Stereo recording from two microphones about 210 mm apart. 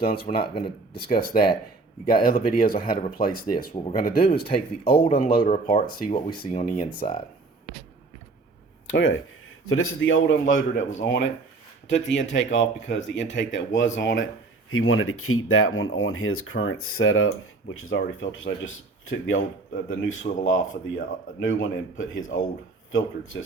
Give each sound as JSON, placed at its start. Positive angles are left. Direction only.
{"t": 0.0, "sound": "speech", "side_deg": 45}
{"t": 0.3, "sound": "speech", "side_deg": 25}
{"t": 1.1, "sound": "speech", "side_deg": 45}
{"t": 4.8, "sound": "speech", "side_deg": 25}
{"t": 5.1, "sound": "speech", "side_deg": 45}
{"t": 5.6, "sound": "speech", "side_deg": 25}
{"t": 6.5, "sound": "speech", "side_deg": 40}
{"t": 8.9, "sound": "speech", "side_deg": 60}
{"t": 9.6, "sound": "speech", "side_deg": 80}
{"t": 10.8, "sound": "speech", "side_deg": 35}
{"t": 11.0, "sound": "speech", "side_deg": 60}
{"t": 14.7, "sound": "speech", "side_deg": 80}